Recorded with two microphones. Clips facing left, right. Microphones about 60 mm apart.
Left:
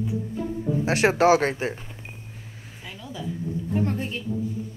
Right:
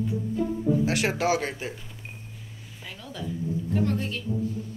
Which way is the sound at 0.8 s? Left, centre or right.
Left.